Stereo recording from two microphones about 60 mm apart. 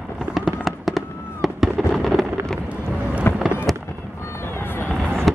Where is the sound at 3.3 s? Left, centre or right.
Left.